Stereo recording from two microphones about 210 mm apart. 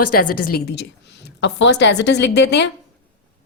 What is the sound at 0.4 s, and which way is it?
Speech, 45° left (ahead or behind).